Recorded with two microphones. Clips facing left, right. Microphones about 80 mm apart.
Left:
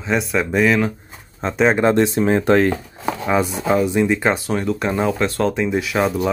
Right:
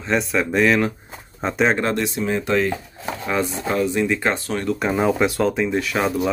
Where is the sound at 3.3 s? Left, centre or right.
Centre.